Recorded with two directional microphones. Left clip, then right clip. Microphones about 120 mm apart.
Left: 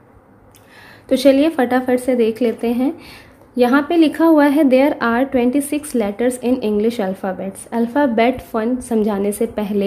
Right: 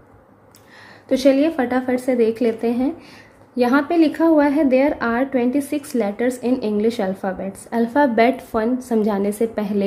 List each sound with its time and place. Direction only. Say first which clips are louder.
1.0 s a woman's voice: left 3 dB; 40° left (ahead or behind)
2.0 s speech: left 2 dB; 20° left (ahead or behind)
3.0 s a woman's voice: left 3 dB; 30° left (ahead or behind)